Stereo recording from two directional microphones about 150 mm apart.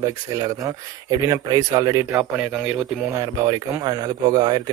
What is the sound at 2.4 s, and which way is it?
Speech, 5° right (ahead or behind).